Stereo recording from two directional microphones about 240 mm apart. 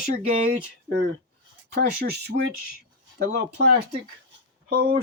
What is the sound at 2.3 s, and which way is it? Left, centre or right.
Speech, right.